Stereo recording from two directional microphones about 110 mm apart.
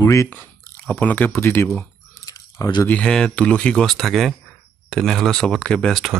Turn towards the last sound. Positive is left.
turn(degrees=0)  # may be behind; listen again after turning